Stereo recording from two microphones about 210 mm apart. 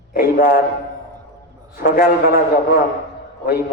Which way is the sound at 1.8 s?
40° left (ahead or behind).